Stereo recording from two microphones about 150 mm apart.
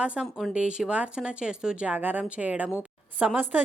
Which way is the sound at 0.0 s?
5° right (ahead or behind).